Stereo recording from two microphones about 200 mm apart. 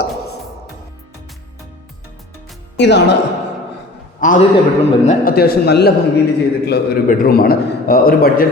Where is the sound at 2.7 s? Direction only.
60° left (ahead or behind).